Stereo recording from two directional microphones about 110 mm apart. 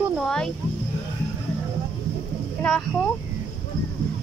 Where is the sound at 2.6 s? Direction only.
15° left (ahead or behind).